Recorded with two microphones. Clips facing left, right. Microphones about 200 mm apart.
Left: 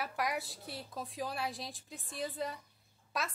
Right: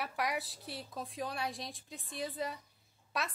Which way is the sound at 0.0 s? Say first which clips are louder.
Even; centre (ahead or behind).